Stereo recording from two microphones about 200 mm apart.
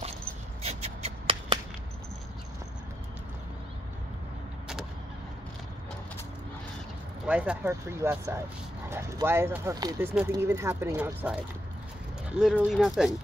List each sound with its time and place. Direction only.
0.6 s shuffle: 30° right (ahead or behind)
7.2 s speech: 5° right (ahead or behind)